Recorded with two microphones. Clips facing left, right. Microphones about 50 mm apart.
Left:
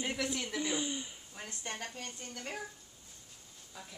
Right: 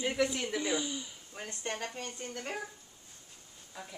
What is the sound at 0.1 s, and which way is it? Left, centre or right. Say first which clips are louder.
Speech: right 5 dB; centre.